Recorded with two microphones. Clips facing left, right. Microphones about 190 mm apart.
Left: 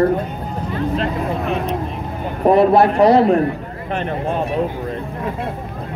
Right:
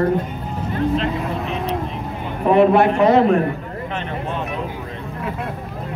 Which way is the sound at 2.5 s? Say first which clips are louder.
Left 1 dB; 35° left (ahead or behind).